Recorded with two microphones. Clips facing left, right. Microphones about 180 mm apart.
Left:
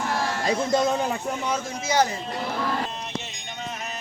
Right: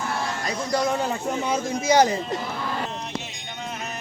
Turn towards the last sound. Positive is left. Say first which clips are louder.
# right 4 dB
turn(degrees=-15)  # may be behind; listen again after turning